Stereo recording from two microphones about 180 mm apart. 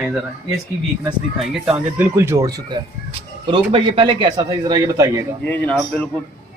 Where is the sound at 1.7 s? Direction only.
10° right (ahead or behind).